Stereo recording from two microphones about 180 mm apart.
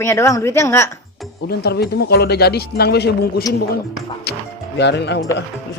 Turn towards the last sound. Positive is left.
turn(degrees=75)  # may be behind; listen again after turning